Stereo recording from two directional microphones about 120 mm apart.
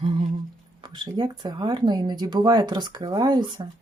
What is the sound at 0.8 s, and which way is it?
Speech, 40° right (ahead or behind).